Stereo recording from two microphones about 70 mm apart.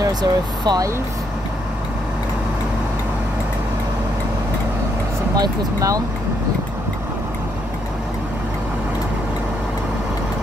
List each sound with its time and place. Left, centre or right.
0.2 s speech: right
5.3 s speech: right